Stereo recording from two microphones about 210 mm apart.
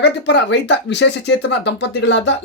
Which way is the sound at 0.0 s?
55° left (ahead or behind).